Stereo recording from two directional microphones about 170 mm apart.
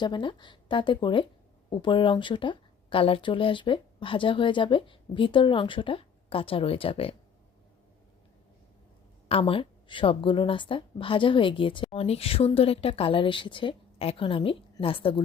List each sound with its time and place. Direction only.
0.0 s speech: 30° left (ahead or behind)
9.3 s speech: 30° left (ahead or behind)